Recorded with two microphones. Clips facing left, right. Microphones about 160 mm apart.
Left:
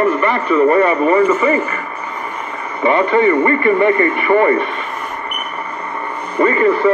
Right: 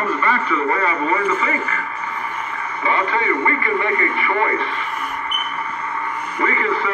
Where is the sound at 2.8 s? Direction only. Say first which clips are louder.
Left 9 dB; 30° left (ahead or behind).